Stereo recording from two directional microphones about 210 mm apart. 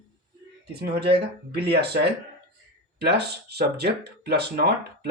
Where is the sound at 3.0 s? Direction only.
50° right (ahead or behind).